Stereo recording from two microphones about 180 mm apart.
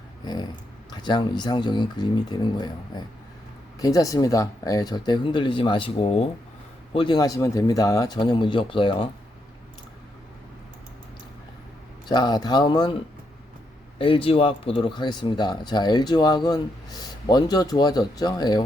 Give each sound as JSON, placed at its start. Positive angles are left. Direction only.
{"t": 0.9, "sound": "speech", "side_deg": 25}
{"t": 3.8, "sound": "speech", "side_deg": 20}
{"t": 12.0, "sound": "speech", "side_deg": 25}
{"t": 14.0, "sound": "speech", "side_deg": 30}